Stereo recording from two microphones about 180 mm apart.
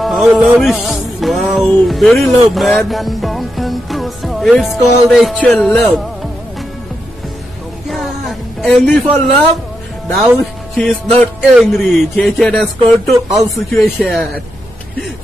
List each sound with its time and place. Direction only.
0.0 s speech: centre (ahead or behind)
2.5 s music: centre (ahead or behind)
7.9 s a sound: centre (ahead or behind)
10.1 s speech: centre (ahead or behind)
13.1 s speech: 20° right (ahead or behind)
13.7 s speech: centre (ahead or behind)